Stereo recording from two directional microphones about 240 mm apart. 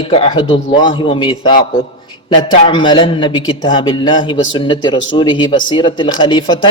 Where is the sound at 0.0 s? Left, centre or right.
Left.